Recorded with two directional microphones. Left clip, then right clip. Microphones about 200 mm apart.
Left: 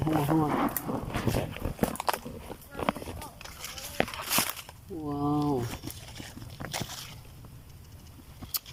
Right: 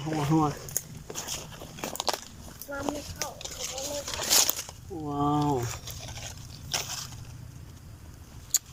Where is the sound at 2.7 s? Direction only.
60° right (ahead or behind).